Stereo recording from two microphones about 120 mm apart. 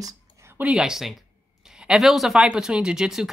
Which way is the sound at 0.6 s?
5° right (ahead or behind).